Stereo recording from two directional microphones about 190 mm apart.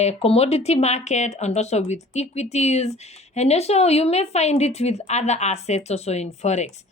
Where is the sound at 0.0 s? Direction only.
35° left (ahead or behind).